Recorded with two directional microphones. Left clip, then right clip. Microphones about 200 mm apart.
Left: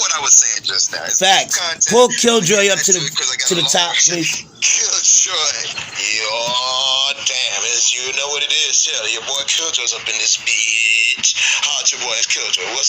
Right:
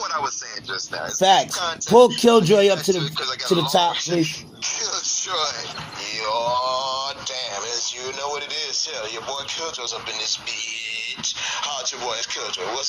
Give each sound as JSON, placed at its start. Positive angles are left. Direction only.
{"t": 0.3, "sound": "a sound", "side_deg": 80}
{"t": 1.2, "sound": "speech", "side_deg": 0}
{"t": 1.8, "sound": "speech", "side_deg": 40}
{"t": 2.1, "sound": "speech", "side_deg": 0}
{"t": 4.6, "sound": "speech", "side_deg": 40}
{"t": 6.3, "sound": "a sound", "side_deg": 40}
{"t": 9.5, "sound": "speech", "side_deg": 40}